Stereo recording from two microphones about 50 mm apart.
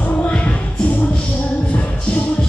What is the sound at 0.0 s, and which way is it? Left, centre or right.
Music, left.